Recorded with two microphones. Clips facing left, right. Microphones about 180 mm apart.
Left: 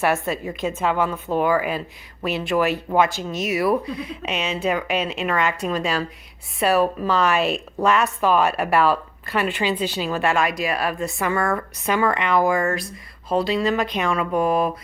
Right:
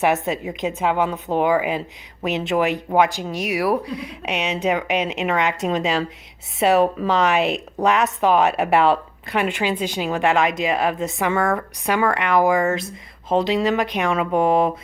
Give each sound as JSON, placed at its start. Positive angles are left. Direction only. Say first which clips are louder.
{"t": 0.0, "sound": "a woman's voice", "louder": "right 2 dB", "side_deg": -20}